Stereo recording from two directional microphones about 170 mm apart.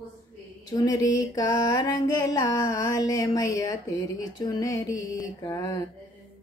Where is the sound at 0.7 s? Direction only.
20° left (ahead or behind).